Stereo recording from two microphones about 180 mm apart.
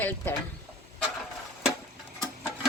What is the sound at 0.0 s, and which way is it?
Speech, 10° left (ahead or behind).